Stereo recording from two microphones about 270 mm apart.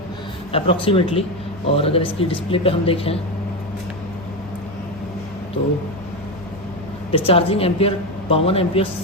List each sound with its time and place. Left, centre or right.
0.5 s a woman's voice: centre
7.1 s a woman's voice: left